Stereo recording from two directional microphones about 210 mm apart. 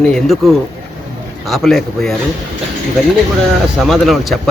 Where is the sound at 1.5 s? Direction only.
Centre (ahead or behind).